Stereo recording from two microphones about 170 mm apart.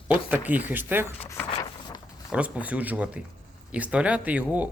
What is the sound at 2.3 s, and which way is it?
Speech, 5° right (ahead or behind).